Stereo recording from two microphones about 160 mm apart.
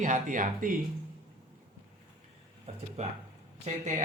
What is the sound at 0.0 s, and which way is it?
Speech, 55° right (ahead or behind).